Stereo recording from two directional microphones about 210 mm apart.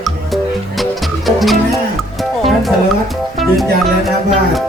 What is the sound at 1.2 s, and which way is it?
Music, centre (ahead or behind).